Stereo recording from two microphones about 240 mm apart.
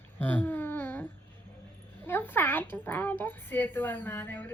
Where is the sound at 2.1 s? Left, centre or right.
Centre.